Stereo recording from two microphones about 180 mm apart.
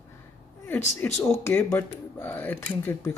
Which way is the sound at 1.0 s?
10° left (ahead or behind).